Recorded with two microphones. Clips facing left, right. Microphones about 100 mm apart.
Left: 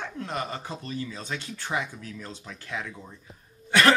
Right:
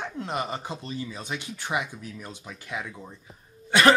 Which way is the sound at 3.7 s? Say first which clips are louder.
Right 2 dB; 20° right (ahead or behind).